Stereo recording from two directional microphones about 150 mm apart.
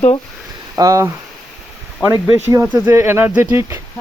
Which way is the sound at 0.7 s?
20° right (ahead or behind).